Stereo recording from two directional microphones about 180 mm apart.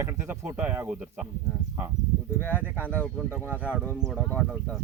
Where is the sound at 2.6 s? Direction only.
10° right (ahead or behind).